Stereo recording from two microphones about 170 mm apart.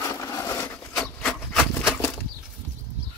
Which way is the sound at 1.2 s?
Centre (ahead or behind).